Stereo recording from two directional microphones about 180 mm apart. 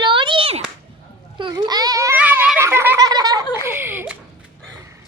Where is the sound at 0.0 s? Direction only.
25° right (ahead or behind); by 4.2 s 10° right (ahead or behind).